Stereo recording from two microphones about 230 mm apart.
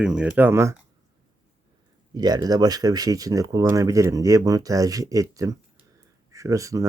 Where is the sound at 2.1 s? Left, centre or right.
Centre.